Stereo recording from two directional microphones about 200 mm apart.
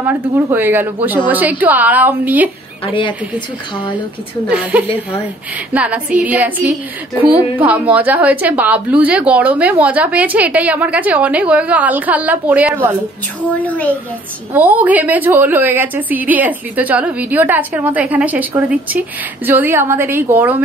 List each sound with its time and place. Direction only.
0.0 s a woman's voice: 10° right (ahead or behind)
2.8 s a woman's voice: 25° left (ahead or behind)
4.5 s a woman's voice: 5° right (ahead or behind)
13.6 s a child's voice: 5° left (ahead or behind)
14.5 s a woman's voice: 10° right (ahead or behind)